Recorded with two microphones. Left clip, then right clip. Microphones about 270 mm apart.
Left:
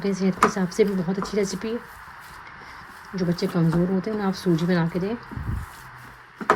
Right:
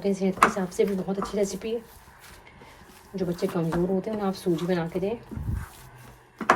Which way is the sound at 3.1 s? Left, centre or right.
Centre.